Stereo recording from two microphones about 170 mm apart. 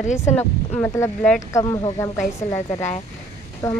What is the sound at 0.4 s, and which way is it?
Speech, 10° left (ahead or behind).